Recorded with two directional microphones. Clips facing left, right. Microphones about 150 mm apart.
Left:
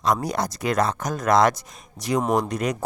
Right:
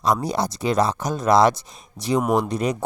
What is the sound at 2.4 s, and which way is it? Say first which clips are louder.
Speech: right 2 dB; 30° right (ahead or behind).